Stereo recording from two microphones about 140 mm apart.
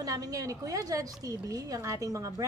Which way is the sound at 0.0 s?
25° right (ahead or behind).